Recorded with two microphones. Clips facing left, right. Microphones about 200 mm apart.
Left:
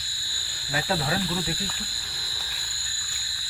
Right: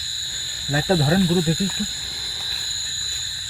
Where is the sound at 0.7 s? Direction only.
35° right (ahead or behind).